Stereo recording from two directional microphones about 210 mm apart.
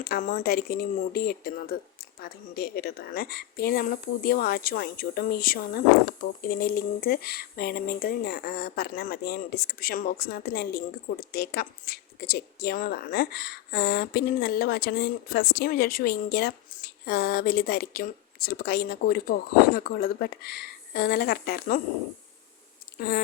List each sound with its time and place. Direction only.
0.0 s speech: 45° left (ahead or behind)
23.0 s speech: 45° left (ahead or behind)